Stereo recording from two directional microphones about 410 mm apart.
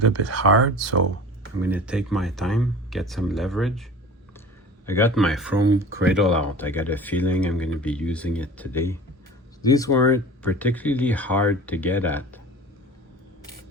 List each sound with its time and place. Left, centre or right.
0.0 s speech: right
1.6 s speech: centre
4.9 s speech: centre